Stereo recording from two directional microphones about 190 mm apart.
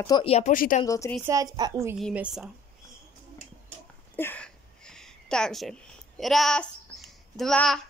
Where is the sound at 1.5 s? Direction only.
20° right (ahead or behind).